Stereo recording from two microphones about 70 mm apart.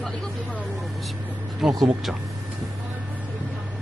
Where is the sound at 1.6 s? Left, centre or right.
Centre.